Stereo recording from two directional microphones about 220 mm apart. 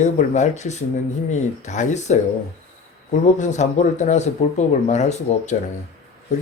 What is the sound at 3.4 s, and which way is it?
A man's voice, 30° left (ahead or behind).